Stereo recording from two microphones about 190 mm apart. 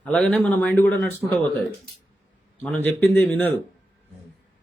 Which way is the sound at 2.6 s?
10° left (ahead or behind).